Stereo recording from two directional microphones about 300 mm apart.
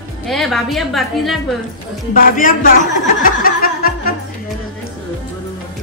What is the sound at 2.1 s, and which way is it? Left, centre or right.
Speech, left.